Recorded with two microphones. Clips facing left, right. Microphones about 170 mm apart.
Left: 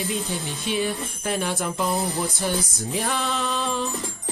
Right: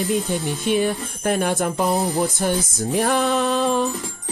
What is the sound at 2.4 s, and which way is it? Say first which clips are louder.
Music: right 3 dB; 50° right (ahead or behind).